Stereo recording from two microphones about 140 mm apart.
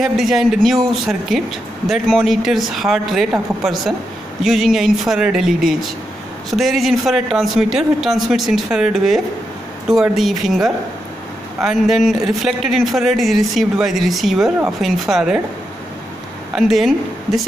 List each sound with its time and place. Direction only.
0.0 s speech: centre (ahead or behind)
16.5 s a woman's voice: centre (ahead or behind)